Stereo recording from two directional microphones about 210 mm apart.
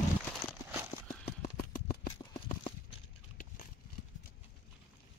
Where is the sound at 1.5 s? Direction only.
45° left (ahead or behind).